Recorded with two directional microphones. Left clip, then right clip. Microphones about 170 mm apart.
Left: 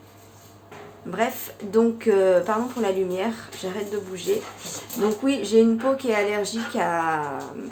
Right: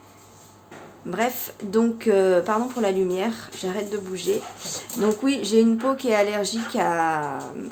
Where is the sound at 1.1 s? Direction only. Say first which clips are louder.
Even; 30° right (ahead or behind).